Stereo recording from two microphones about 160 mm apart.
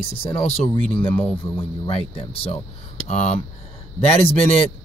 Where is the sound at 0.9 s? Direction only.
10° left (ahead or behind).